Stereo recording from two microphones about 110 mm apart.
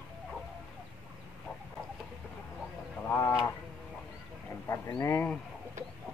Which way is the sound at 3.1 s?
30° left (ahead or behind).